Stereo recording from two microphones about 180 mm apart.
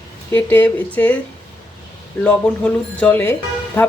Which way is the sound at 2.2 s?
5° left (ahead or behind).